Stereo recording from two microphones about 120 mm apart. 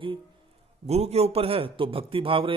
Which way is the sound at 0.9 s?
60° right (ahead or behind).